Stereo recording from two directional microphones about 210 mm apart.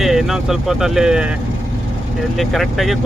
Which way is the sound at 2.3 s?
Centre (ahead or behind).